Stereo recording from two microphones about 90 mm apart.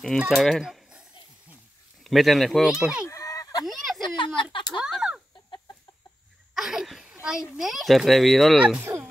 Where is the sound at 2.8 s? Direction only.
10° right (ahead or behind).